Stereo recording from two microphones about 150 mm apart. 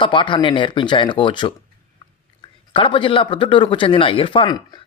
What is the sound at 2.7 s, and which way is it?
Speech, 35° left (ahead or behind).